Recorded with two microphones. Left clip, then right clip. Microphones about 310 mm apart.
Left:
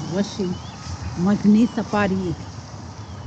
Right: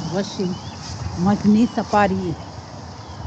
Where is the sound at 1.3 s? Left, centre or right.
Centre.